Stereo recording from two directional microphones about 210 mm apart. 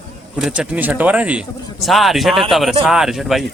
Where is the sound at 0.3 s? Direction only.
5° right (ahead or behind).